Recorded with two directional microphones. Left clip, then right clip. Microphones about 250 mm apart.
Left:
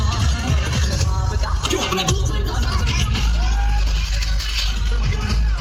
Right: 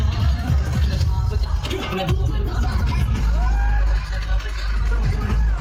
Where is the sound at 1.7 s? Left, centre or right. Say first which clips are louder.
Left 4 dB; centre.